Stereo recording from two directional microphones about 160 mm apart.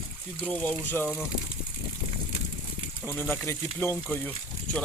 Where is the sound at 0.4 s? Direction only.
10° left (ahead or behind).